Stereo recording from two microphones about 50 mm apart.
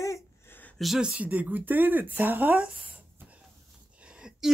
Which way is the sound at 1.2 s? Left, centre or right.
Right.